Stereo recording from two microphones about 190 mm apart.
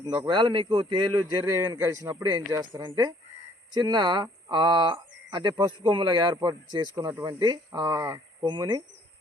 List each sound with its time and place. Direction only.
0.0 s speech: 20° right (ahead or behind)